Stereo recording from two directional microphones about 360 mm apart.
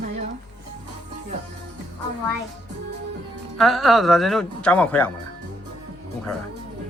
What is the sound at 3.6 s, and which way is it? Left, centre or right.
Speech, centre.